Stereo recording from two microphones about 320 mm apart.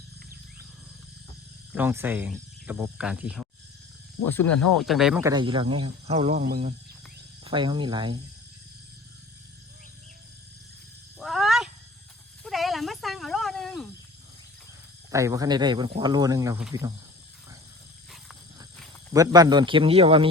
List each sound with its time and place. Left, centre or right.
1.7 s speech: centre
4.7 s speech: centre
11.2 s cat: centre
12.4 s snake: centre
15.1 s speech: centre
19.1 s speech: centre